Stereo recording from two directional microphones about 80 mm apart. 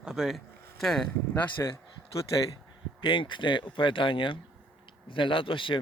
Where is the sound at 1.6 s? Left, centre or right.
Left.